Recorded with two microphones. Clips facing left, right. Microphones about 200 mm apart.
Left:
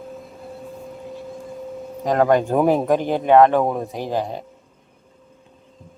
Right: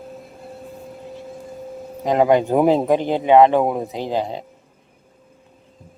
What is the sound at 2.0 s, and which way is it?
Speech, 10° right (ahead or behind).